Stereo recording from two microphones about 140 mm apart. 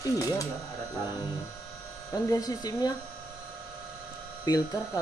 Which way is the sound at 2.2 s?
25° left (ahead or behind).